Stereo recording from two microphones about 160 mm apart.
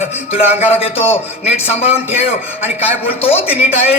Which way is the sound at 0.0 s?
40° left (ahead or behind).